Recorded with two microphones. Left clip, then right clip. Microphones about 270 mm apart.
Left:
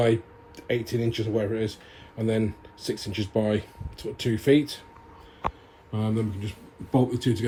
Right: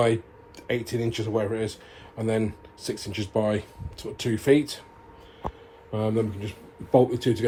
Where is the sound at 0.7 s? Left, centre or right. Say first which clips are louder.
Even; right.